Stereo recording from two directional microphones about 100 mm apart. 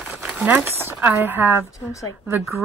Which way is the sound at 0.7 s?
20° right (ahead or behind).